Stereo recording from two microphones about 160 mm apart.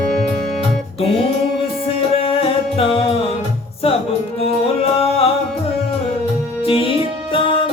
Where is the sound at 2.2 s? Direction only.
35° left (ahead or behind).